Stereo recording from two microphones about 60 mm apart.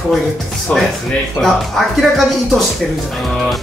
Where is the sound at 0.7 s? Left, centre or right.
Left.